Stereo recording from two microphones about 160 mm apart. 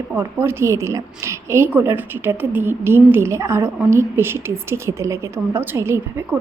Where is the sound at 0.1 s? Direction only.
15° right (ahead or behind).